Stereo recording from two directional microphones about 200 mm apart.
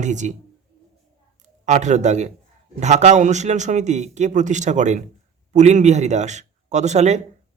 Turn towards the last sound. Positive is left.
turn(degrees=-35)  # may be behind; listen again after turning